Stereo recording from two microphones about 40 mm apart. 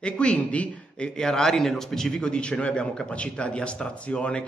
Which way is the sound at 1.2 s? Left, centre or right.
Centre.